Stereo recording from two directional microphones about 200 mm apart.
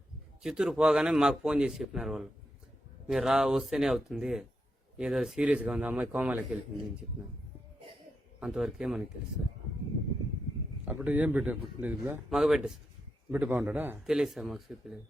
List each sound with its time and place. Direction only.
0.4 s a man's voice: 5° right (ahead or behind)
8.4 s a man's voice: 5° right (ahead or behind)
10.8 s a man's voice: 10° right (ahead or behind)